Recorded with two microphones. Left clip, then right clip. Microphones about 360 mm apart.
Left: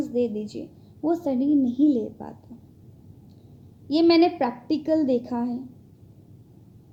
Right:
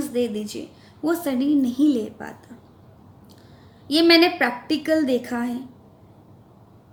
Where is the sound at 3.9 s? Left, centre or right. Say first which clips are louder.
Right 3 dB; centre.